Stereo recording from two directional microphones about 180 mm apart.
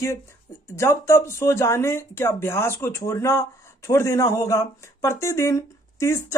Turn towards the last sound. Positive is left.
turn(degrees=15)  # may be behind; listen again after turning